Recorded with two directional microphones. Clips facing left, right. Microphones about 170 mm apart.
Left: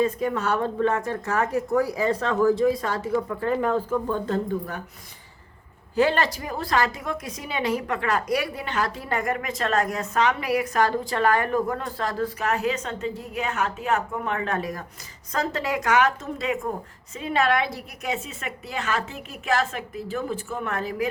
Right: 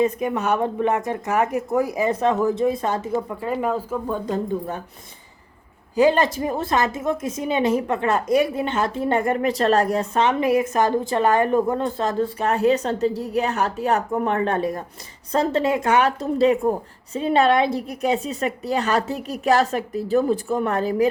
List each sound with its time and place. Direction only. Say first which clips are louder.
0.0 s a woman's voice: right 2 dB; 20° right (ahead or behind)
3.4 s speech: even; 10° right (ahead or behind)
6.0 s a woman's voice: right 5 dB; 15° right (ahead or behind); by 21.1 s 35° right (ahead or behind)